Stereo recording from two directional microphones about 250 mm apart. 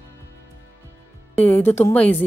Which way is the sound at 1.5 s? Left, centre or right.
Centre.